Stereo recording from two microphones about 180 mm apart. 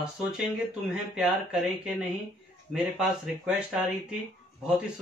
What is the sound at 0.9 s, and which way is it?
Speech, 5° right (ahead or behind).